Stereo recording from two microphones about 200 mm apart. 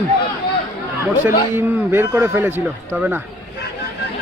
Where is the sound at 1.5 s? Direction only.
10° right (ahead or behind).